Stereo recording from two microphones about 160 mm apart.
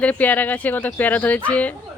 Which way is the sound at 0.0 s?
10° left (ahead or behind).